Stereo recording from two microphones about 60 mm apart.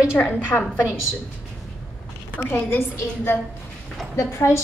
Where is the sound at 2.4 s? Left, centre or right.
Left.